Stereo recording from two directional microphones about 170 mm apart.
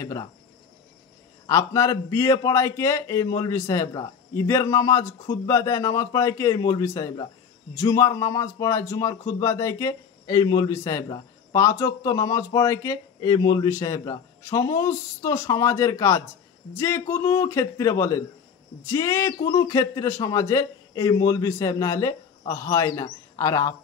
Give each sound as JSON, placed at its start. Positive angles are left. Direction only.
{"t": 0.0, "sound": "a man's voice", "side_deg": 20}
{"t": 1.5, "sound": "a man's voice", "side_deg": 20}